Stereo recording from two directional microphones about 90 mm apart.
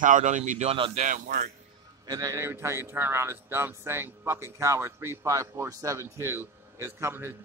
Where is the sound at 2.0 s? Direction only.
45° right (ahead or behind).